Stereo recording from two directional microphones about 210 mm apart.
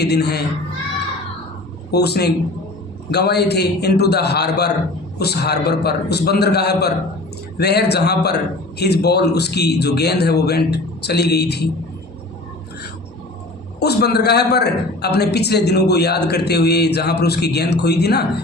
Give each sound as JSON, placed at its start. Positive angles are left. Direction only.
{"t": 0.0, "sound": "a man's voice", "side_deg": 50}
{"t": 1.9, "sound": "a man's voice", "side_deg": 50}
{"t": 13.7, "sound": "a man's voice", "side_deg": 50}